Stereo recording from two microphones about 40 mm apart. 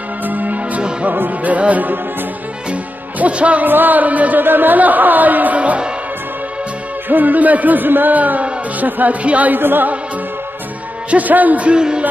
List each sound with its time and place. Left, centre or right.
0.2 s music: right
3.6 s a man's voice: right
4.4 s a man's voice: right
7.1 s a man's voice: right
9.2 s music: right
9.5 s music: right
11.1 s a man's voice: right
11.6 s speech: right